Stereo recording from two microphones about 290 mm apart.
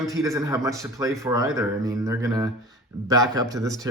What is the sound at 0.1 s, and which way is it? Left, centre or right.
Speech, centre.